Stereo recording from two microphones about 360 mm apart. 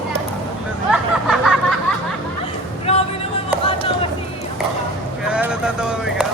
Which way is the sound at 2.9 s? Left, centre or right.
Centre.